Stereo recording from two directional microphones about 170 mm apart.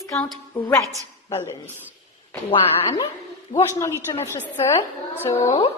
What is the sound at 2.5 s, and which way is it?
Speech, 25° left (ahead or behind).